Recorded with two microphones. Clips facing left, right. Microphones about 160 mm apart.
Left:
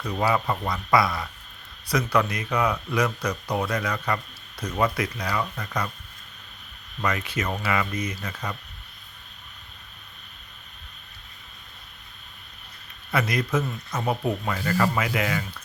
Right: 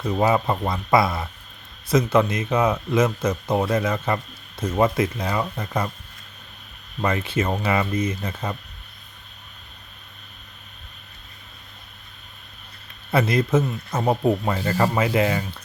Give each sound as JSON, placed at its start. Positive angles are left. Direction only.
{"t": 0.0, "sound": "speech", "side_deg": -25}
{"t": 7.0, "sound": "speech", "side_deg": -30}
{"t": 13.1, "sound": "speech", "side_deg": -30}